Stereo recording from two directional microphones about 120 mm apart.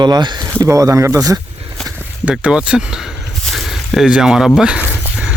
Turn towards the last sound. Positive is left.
turn(degrees=15)  # may be behind; listen again after turning